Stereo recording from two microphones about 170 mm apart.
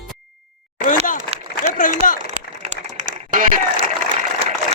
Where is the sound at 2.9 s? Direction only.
50° right (ahead or behind).